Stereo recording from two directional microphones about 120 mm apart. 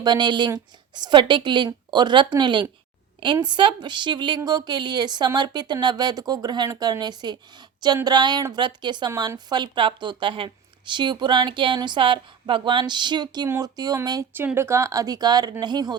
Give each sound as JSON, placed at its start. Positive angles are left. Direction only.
{"t": 0.0, "sound": "a woman's voice", "side_deg": -40}
{"t": 14.3, "sound": "a woman's voice", "side_deg": -20}